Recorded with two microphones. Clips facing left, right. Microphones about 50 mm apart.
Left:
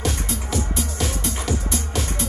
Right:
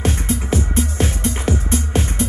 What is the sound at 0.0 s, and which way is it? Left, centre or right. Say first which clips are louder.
Music: right 5 dB; right.